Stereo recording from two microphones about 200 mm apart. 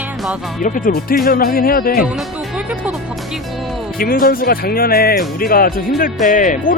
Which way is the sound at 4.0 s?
45° left (ahead or behind).